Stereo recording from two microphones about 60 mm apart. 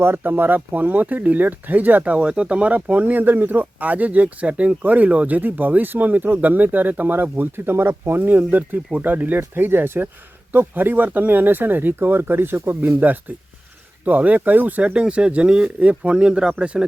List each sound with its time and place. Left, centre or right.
0.0 s speech: right; by 16.8 s centre